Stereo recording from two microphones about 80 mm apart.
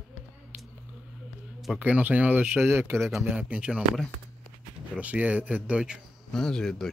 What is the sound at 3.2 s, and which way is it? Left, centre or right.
Speech, centre.